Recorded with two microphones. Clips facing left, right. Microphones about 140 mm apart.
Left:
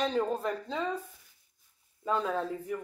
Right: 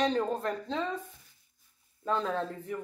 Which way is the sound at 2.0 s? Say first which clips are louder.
Even; 5° left (ahead or behind).